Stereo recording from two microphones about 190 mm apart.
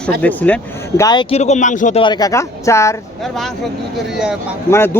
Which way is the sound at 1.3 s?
35° left (ahead or behind).